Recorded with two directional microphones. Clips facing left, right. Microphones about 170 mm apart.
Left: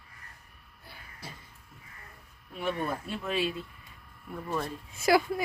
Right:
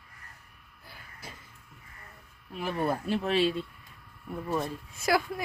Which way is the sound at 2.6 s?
35° right (ahead or behind).